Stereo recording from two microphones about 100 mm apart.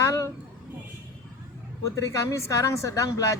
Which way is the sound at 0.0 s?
30° left (ahead or behind).